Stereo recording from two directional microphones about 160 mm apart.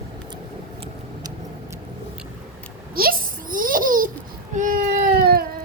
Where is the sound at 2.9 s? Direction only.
65° right (ahead or behind).